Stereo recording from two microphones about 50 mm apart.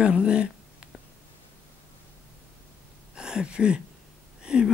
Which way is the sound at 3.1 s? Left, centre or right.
Centre.